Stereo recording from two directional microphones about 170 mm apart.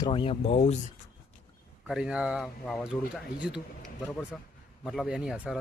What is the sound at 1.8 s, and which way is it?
Speech, 5° right (ahead or behind).